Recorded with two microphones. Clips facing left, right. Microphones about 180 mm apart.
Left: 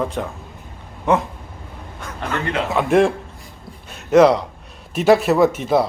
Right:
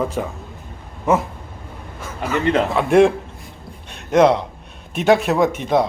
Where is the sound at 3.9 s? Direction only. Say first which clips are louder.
Left 2 dB; centre (ahead or behind).